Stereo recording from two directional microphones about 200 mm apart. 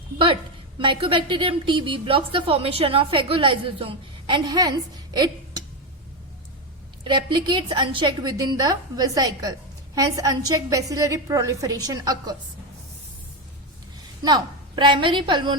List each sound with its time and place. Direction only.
0.8 s a woman's voice: 25° right (ahead or behind)
5.1 s a sound: 20° right (ahead or behind)
7.0 s a woman's voice: 25° right (ahead or behind)
14.2 s a woman's voice: 20° right (ahead or behind)